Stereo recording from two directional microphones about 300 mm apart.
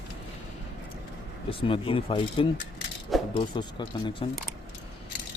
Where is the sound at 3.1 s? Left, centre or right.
Centre.